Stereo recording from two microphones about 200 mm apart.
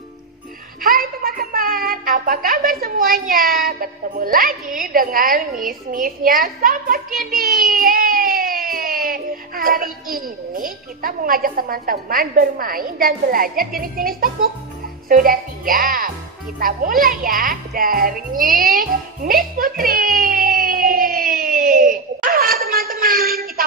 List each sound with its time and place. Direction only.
0.8 s a woman's voice: 45° right (ahead or behind)
5.9 s music: 45° right (ahead or behind)
7.2 s speech: 45° right (ahead or behind)
16.5 s music: 45° right (ahead or behind)